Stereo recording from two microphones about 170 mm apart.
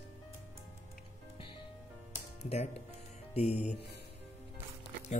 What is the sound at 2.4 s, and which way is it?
Speech, 40° left (ahead or behind).